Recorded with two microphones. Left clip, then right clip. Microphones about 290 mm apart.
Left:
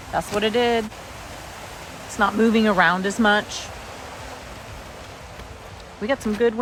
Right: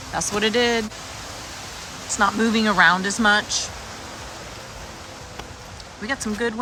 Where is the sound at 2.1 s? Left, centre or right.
Centre.